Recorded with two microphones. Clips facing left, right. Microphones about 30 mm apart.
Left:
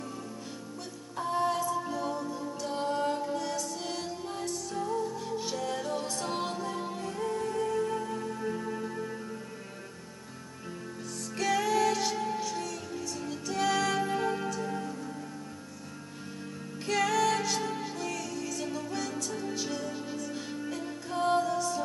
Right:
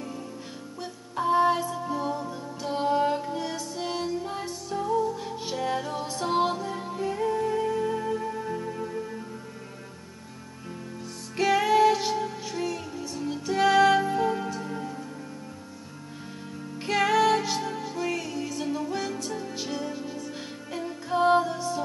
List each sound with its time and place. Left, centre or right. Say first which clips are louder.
1.1 s music: right 7 dB; right; by 7.0 s centre
7.0 s music: right 9 dB; centre
11.3 s music: right 6 dB; right
14.0 s music: right 4 dB; centre
16.8 s music: right 5 dB; right; by 18.0 s centre
18.0 s music: right 5 dB; right
19.9 s music: right 2 dB; centre
20.8 s music: right 8 dB; right